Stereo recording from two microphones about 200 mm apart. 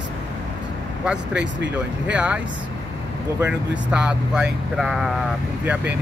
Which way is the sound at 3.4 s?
5° right (ahead or behind).